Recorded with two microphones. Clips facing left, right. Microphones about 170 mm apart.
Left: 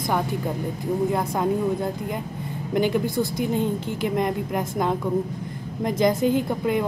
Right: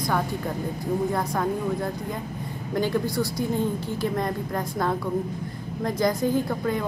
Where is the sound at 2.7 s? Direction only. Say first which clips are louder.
Left 3 dB; 20° left (ahead or behind).